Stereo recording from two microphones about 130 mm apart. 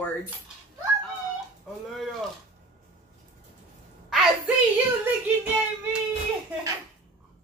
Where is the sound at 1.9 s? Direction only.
Centre (ahead or behind).